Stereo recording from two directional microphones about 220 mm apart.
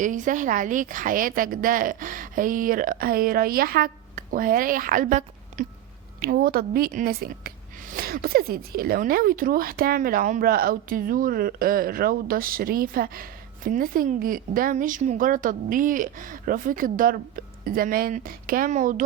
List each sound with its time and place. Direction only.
0.0 s a woman's voice: 35° right (ahead or behind)